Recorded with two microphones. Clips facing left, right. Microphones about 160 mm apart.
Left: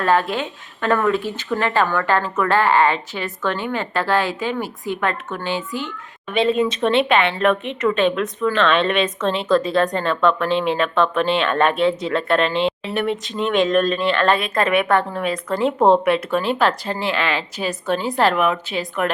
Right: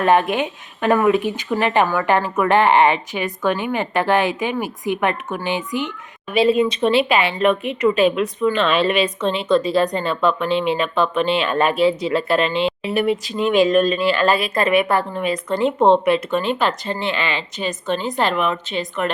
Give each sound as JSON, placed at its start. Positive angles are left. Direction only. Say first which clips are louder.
{"t": 0.0, "sound": "speech", "louder": "right 3 dB", "side_deg": -20}
{"t": 6.3, "sound": "a woman's voice", "louder": "right 2 dB", "side_deg": -5}